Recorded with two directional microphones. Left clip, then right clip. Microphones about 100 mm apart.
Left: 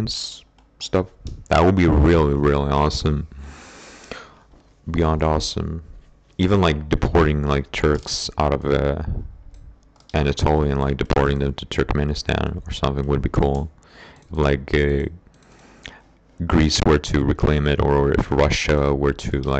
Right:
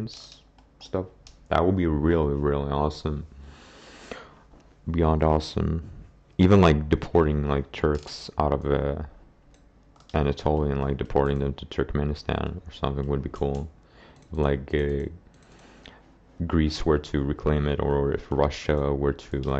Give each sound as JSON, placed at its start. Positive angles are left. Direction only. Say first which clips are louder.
{"t": 0.0, "sound": "speech", "louder": "left 12 dB", "side_deg": 35}
{"t": 1.5, "sound": "speech", "louder": "left 7 dB", "side_deg": 25}
{"t": 6.3, "sound": "speech", "louder": "even", "side_deg": 0}
{"t": 7.2, "sound": "speech", "louder": "left 4 dB", "side_deg": 15}
{"t": 8.4, "sound": "speech", "louder": "left 4 dB", "side_deg": 5}
{"t": 10.3, "sound": "speech", "louder": "left 5 dB", "side_deg": 20}
{"t": 14.4, "sound": "a sound", "louder": "left 6 dB", "side_deg": 15}
{"t": 16.3, "sound": "speech", "louder": "left 8 dB", "side_deg": 25}